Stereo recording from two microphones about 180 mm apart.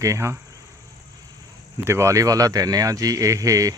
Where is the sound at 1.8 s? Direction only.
15° right (ahead or behind).